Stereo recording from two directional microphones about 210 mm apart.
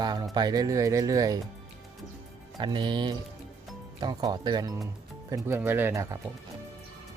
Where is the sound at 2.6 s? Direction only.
20° right (ahead or behind).